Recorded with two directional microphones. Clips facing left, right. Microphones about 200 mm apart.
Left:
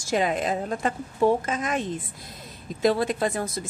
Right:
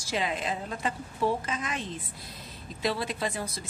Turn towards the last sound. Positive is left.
turn(degrees=50)  # may be behind; listen again after turning